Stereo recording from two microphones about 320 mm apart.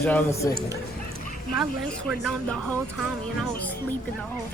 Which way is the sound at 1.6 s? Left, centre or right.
Centre.